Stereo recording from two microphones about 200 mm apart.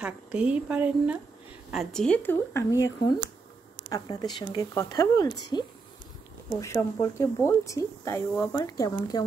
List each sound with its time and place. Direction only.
0.0 s a woman's voice: 5° right (ahead or behind); by 2.9 s 15° left (ahead or behind)
3.9 s speech: 20° left (ahead or behind)